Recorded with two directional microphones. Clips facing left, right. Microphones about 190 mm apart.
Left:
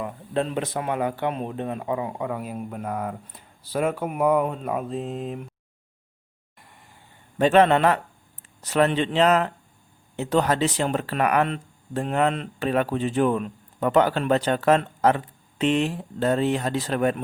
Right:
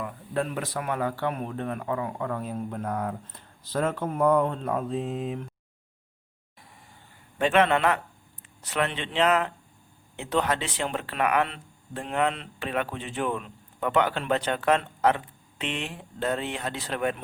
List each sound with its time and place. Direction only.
0.0 s speech: 25° left (ahead or behind); by 5.5 s centre (ahead or behind)
6.6 s vehicle: centre (ahead or behind)
7.3 s speech: 40° left (ahead or behind)